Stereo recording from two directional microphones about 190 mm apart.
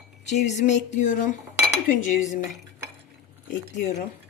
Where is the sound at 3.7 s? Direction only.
40° left (ahead or behind).